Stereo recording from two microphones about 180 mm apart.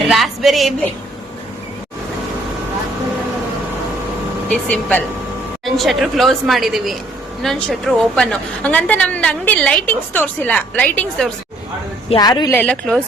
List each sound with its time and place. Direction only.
0.1 s a sound: centre (ahead or behind)
4.4 s a woman's voice: 5° left (ahead or behind)
12.0 s a woman's voice: 25° left (ahead or behind)
12.5 s a woman's voice: 10° left (ahead or behind)